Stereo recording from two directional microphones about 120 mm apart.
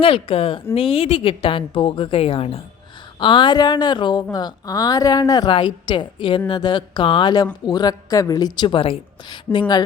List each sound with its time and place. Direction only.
0.0 s a woman's voice: 50° left (ahead or behind)
3.2 s a woman's voice: 40° left (ahead or behind)
5.5 s a woman's voice: 40° left (ahead or behind)